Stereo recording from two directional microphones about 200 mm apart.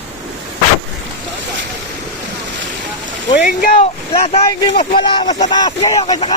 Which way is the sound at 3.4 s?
45° left (ahead or behind).